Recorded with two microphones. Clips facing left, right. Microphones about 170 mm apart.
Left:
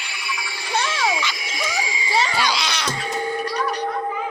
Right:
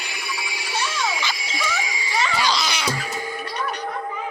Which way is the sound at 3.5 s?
35° left (ahead or behind).